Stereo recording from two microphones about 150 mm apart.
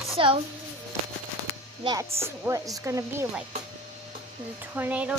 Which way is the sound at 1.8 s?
25° right (ahead or behind).